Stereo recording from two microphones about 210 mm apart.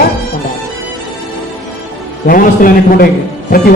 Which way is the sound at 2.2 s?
40° left (ahead or behind).